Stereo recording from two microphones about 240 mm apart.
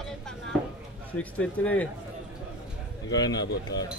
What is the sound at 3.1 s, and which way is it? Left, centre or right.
Speech, centre.